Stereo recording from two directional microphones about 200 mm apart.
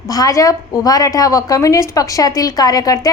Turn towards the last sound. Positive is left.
turn(degrees=15)  # may be behind; listen again after turning